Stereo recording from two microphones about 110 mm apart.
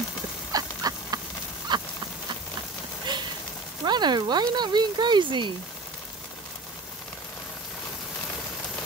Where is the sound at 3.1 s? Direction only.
40° right (ahead or behind).